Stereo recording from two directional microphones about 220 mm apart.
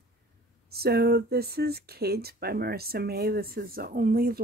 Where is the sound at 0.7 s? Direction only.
45° right (ahead or behind).